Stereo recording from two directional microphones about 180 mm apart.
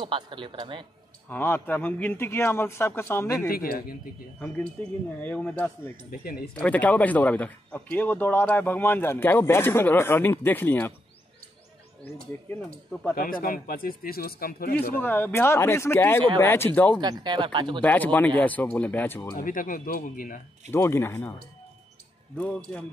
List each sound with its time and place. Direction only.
0.0 s speech: 25° right (ahead or behind)
1.3 s a man's voice: 10° left (ahead or behind)
3.4 s speech: 55° left (ahead or behind)
5.2 s a man's voice: 10° left (ahead or behind)
12.0 s a man's voice: 10° left (ahead or behind)
13.1 s speech: 55° left (ahead or behind)
15.0 s a man's voice: 10° left (ahead or behind)
17.0 s speech: 25° right (ahead or behind)
17.8 s a man's voice: 10° left (ahead or behind)
19.3 s speech: 50° left (ahead or behind)
20.7 s a man's voice: 15° left (ahead or behind)